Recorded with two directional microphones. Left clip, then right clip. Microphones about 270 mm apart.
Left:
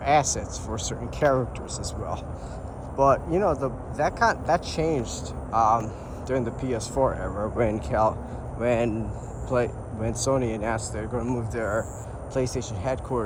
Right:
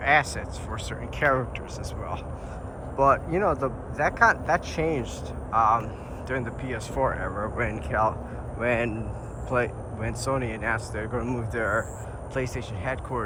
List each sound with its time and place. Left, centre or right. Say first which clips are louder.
0.0 s a man's voice: even; centre
3.0 s a man's voice: left 1 dB; centre